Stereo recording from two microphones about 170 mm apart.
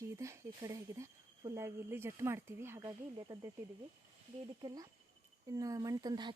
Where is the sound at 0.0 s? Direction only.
15° right (ahead or behind).